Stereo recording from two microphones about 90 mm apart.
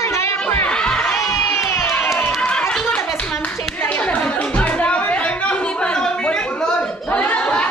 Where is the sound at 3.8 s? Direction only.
15° left (ahead or behind).